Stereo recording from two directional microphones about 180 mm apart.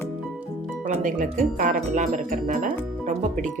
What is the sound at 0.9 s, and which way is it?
Speech, 45° right (ahead or behind).